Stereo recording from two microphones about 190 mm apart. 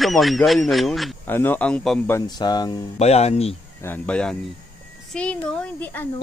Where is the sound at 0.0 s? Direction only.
Centre (ahead or behind).